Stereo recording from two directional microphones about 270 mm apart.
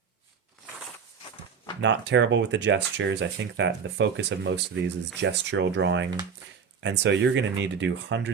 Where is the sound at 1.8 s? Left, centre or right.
Right.